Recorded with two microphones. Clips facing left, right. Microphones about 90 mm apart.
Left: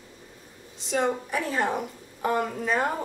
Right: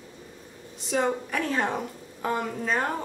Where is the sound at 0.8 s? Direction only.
Centre (ahead or behind).